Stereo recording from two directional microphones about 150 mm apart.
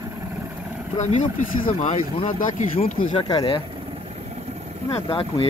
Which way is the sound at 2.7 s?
40° left (ahead or behind).